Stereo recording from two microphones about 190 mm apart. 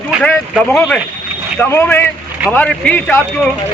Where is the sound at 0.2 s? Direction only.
Centre (ahead or behind).